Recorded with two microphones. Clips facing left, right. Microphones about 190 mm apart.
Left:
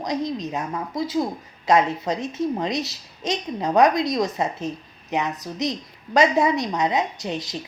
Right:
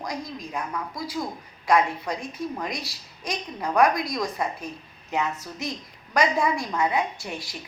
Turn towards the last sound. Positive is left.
turn(degrees=20)  # may be behind; listen again after turning